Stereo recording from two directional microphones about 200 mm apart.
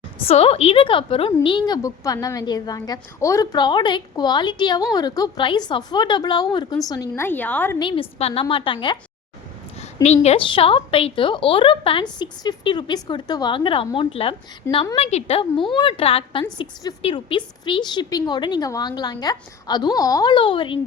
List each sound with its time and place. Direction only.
0.3 s a woman's voice: 30° left (ahead or behind); by 7.8 s 10° left (ahead or behind)
7.8 s speech: 25° left (ahead or behind)
9.8 s a sound: 35° left (ahead or behind)
10.2 s speech: 25° left (ahead or behind)